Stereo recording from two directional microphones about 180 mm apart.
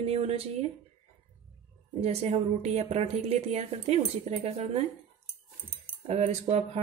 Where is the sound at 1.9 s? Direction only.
35° right (ahead or behind).